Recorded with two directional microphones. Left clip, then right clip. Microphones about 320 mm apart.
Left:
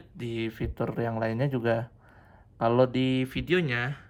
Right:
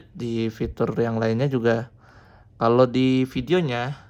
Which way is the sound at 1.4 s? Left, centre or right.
Left.